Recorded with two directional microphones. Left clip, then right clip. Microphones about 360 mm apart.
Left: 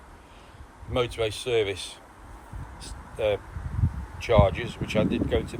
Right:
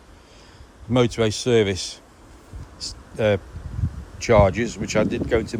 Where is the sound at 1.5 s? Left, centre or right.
Right.